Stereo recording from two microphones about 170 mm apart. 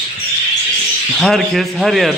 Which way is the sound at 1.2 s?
Centre (ahead or behind).